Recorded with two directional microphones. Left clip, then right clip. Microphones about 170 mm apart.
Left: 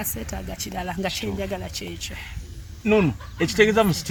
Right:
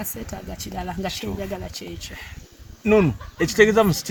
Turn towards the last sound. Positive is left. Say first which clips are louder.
# right 2 dB
turn(degrees=-50)  # may be behind; listen again after turning